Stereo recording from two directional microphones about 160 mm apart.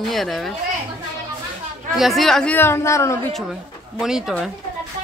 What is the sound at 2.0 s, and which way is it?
Speech, centre (ahead or behind).